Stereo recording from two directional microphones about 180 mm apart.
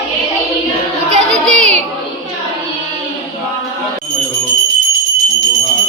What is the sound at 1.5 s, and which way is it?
Music, 40° right (ahead or behind).